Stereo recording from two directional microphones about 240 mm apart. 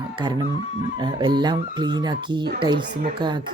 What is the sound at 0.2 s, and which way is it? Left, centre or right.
Speech, centre.